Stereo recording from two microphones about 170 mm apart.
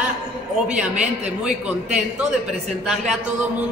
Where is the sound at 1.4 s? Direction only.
5° right (ahead or behind).